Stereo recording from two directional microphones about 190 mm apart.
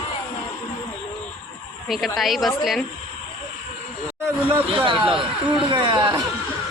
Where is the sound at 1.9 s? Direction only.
Centre (ahead or behind).